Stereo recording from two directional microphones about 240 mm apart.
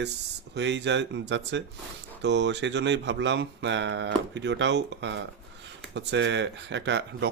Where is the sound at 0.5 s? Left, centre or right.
Right.